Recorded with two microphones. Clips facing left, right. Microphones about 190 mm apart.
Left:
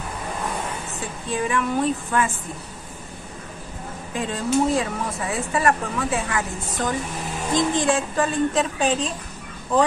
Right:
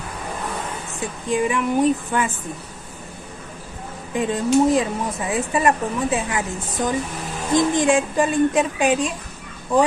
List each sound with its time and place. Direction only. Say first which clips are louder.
1.3 s a woman's voice: right 3 dB; 15° right (ahead or behind)
4.1 s a woman's voice: right 4 dB; 20° right (ahead or behind)